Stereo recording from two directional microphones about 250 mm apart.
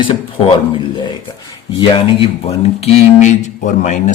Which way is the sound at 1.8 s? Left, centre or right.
Left.